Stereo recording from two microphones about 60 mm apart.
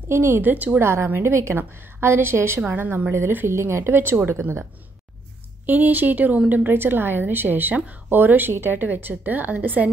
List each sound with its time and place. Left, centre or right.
0.1 s a woman's voice: right
0.4 s speech: right
0.7 s a woman's voice: right
2.7 s a woman's voice: right
5.7 s a woman's voice: right